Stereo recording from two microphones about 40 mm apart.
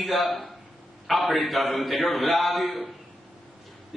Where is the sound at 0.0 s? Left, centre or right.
Centre.